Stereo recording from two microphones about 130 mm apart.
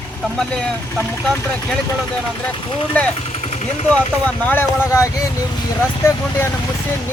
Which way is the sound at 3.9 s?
10° left (ahead or behind).